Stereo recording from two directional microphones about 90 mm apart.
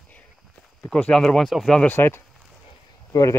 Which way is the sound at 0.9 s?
10° left (ahead or behind).